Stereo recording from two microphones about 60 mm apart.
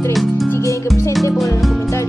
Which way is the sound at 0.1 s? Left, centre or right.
Centre.